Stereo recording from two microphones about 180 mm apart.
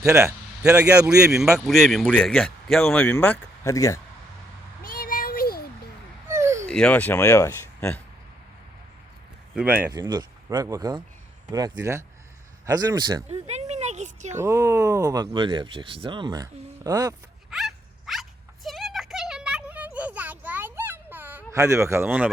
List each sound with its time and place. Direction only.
0.0 s a man's voice: 15° right (ahead or behind); by 4.0 s 15° left (ahead or behind)
4.8 s a sound: 55° left (ahead or behind)
6.2 s a sound: 15° right (ahead or behind)
6.7 s speech: 5° left (ahead or behind)
9.6 s speech: 10° right (ahead or behind)
9.9 s speech: 20° right (ahead or behind)
13.2 s a sound: 35° right (ahead or behind)
14.4 s speech: 15° right (ahead or behind)
17.5 s dog: centre (ahead or behind)